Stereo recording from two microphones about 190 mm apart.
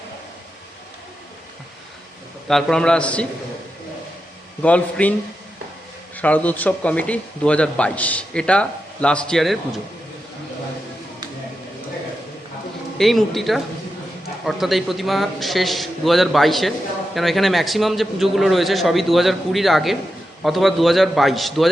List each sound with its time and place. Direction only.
2.5 s a man's voice: centre (ahead or behind)
4.6 s a man's voice: 5° left (ahead or behind)
6.1 s a man's voice: 10° left (ahead or behind)
13.0 s a man's voice: centre (ahead or behind)